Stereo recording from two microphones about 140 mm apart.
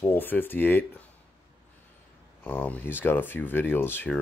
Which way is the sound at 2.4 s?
10° left (ahead or behind).